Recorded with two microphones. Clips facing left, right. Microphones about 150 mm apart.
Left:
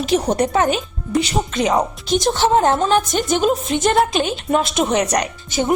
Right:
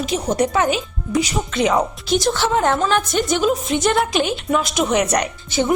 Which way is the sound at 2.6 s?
25° left (ahead or behind).